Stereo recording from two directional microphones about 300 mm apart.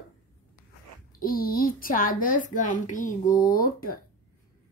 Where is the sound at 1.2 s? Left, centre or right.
Left.